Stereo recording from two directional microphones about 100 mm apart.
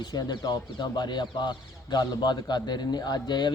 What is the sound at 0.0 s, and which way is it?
Speech, 45° left (ahead or behind).